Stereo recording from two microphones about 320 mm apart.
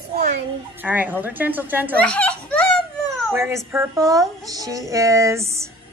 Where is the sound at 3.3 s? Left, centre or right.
Centre.